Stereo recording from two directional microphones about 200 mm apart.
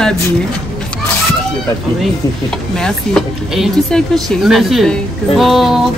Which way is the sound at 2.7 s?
5° left (ahead or behind).